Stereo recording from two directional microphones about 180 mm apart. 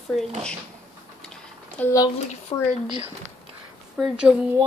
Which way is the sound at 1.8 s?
20° left (ahead or behind).